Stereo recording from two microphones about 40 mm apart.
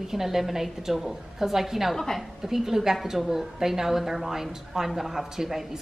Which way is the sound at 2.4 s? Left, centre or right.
Centre.